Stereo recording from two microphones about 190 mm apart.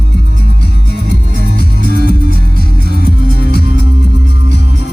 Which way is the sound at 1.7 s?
50° right (ahead or behind).